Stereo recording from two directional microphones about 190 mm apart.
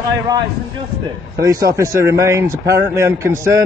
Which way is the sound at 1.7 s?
15° right (ahead or behind).